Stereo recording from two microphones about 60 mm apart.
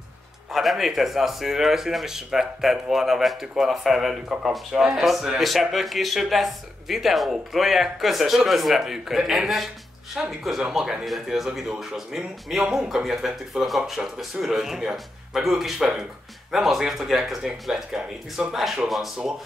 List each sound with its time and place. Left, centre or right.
0.5 s speech: centre